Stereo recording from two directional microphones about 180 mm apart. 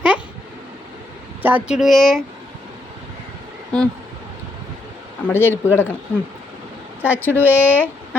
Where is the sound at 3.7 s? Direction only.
5° left (ahead or behind).